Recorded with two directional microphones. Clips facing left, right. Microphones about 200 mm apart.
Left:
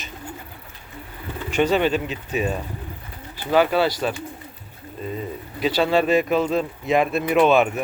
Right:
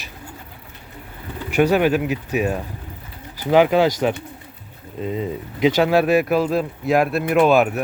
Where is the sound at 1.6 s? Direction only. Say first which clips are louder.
Right 3 dB; 10° right (ahead or behind).